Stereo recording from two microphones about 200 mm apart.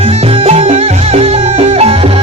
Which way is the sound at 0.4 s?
35° right (ahead or behind).